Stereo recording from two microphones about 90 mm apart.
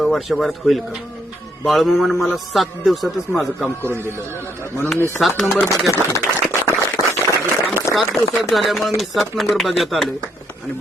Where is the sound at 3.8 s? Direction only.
25° right (ahead or behind).